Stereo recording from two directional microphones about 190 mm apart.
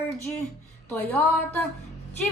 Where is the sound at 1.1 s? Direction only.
10° left (ahead or behind).